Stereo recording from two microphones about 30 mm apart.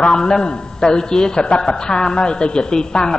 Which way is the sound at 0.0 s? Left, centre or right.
Left.